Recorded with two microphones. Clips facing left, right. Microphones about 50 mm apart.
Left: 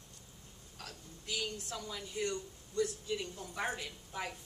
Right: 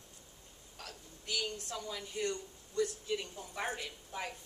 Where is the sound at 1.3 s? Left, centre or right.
Centre.